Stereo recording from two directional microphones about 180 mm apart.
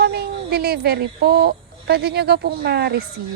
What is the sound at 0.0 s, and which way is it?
Speech, 60° right (ahead or behind).